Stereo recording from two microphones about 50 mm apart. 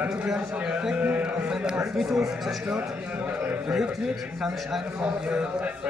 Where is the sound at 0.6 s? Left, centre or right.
Right.